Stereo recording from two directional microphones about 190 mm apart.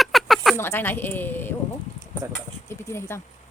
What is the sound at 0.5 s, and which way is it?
Speech, 10° left (ahead or behind).